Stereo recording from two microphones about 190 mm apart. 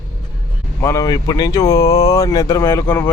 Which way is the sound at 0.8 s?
15° left (ahead or behind).